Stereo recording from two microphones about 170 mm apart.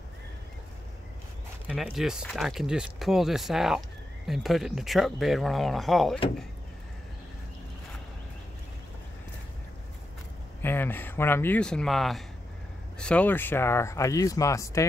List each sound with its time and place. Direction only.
1.7 s speech: 5° right (ahead or behind)
10.6 s speech: 10° left (ahead or behind)